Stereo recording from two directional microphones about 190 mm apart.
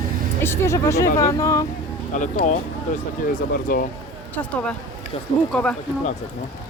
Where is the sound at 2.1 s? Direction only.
40° left (ahead or behind).